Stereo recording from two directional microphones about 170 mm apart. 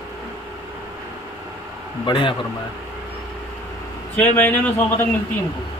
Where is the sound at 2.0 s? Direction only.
30° left (ahead or behind).